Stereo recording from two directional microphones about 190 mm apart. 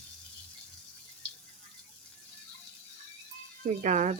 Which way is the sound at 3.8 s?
40° right (ahead or behind).